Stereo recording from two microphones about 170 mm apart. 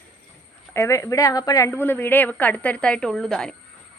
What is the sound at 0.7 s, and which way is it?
A woman's voice, 15° left (ahead or behind).